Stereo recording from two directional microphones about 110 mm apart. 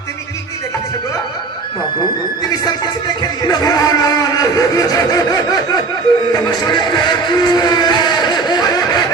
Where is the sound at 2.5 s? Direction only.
40° left (ahead or behind).